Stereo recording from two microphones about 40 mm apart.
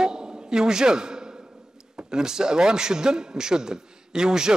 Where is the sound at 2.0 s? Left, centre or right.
Centre.